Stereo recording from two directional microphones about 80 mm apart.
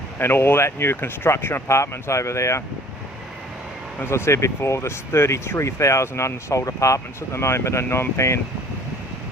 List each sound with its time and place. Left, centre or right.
0.2 s speech: left
4.0 s speech: left